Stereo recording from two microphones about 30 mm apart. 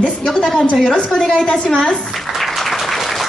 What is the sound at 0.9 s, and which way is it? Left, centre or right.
Speech, left.